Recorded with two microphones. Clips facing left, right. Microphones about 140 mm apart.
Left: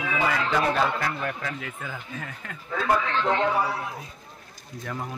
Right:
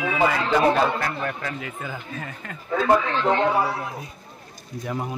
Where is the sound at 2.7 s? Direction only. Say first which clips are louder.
Right 4 dB; 25° right (ahead or behind).